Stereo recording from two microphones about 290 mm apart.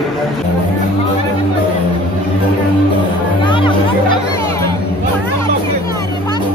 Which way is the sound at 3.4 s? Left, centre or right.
Centre.